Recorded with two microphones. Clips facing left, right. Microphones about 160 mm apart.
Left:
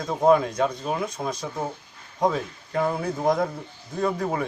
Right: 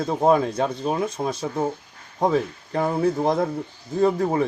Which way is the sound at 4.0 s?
35° right (ahead or behind).